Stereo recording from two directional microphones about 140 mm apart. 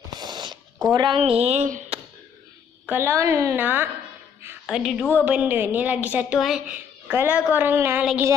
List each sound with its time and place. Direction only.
0.2 s a sound: 30° right (ahead or behind)
0.9 s a woman's voice: 35° right (ahead or behind); by 1.9 s 60° right (ahead or behind)
2.9 s a woman's voice: 20° right (ahead or behind)
4.6 s a woman's voice: 5° right (ahead or behind)
4.9 s a woman's voice: 10° left (ahead or behind)
5.2 s a woman's voice: 10° right (ahead or behind)
7.1 s a woman's voice: 15° right (ahead or behind)
8.0 s a woman's voice: 5° right (ahead or behind)